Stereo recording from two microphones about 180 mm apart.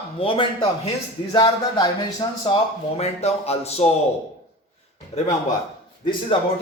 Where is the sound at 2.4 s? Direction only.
35° left (ahead or behind).